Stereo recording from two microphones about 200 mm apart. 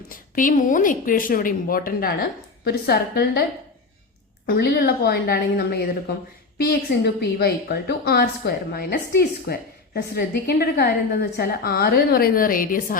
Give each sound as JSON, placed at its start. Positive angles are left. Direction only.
{"t": 0.1, "sound": "a woman's voice", "side_deg": 40}
{"t": 4.4, "sound": "a woman's voice", "side_deg": 55}